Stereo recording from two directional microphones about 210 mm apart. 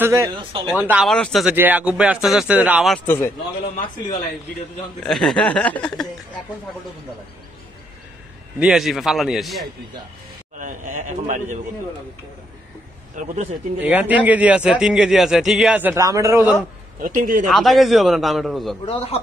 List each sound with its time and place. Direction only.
0.0 s speech: 15° right (ahead or behind)
0.8 s speech: centre (ahead or behind)
3.1 s a man's voice: 10° left (ahead or behind)
5.0 s speech: centre (ahead or behind)
8.5 s speech: centre (ahead or behind)
10.6 s a man's voice: 40° right (ahead or behind)
13.2 s speech: 35° right (ahead or behind)
13.8 s a man's voice: 5° right (ahead or behind)
17.0 s speech: 40° right (ahead or behind)
17.5 s speech: centre (ahead or behind)
18.9 s a man's voice: 30° left (ahead or behind)